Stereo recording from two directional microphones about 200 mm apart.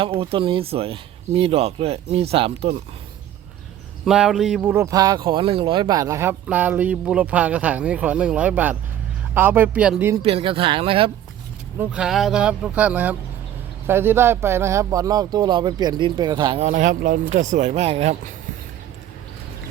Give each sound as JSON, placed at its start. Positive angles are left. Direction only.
{"t": 0.0, "sound": "speech", "side_deg": -25}
{"t": 4.0, "sound": "speech", "side_deg": 0}
{"t": 10.2, "sound": "speech", "side_deg": -30}
{"t": 11.8, "sound": "speech", "side_deg": -5}